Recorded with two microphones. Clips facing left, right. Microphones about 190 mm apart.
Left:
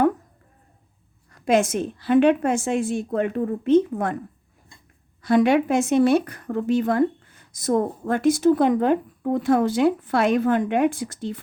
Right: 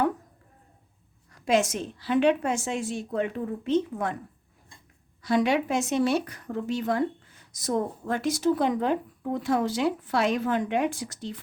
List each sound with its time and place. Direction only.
1.3 s speech: 55° left (ahead or behind)
5.2 s speech: 55° left (ahead or behind)